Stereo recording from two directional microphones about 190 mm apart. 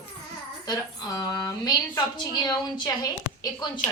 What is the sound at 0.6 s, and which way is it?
A woman's voice, 20° left (ahead or behind).